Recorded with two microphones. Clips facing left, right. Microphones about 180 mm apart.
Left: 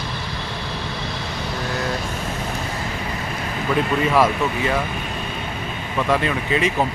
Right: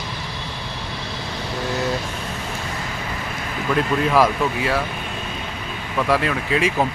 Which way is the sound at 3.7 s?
Centre (ahead or behind).